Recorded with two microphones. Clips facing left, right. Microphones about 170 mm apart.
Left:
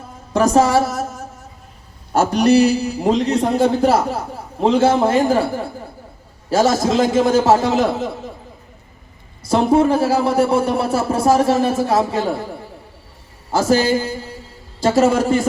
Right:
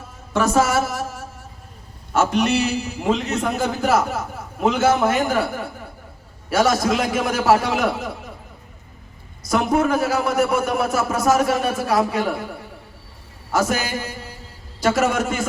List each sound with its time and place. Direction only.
0.3 s a man's voice: 30° left (ahead or behind)
2.1 s a man's voice: 35° left (ahead or behind)
9.4 s a man's voice: 30° left (ahead or behind)